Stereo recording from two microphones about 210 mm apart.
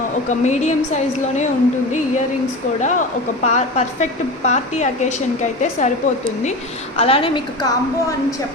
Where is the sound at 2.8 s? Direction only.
35° left (ahead or behind).